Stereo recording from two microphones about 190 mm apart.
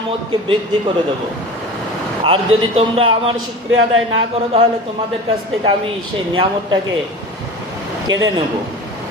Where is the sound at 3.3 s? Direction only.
90° right.